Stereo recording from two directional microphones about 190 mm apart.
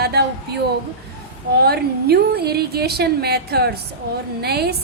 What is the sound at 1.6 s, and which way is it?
A woman's voice, 55° right (ahead or behind).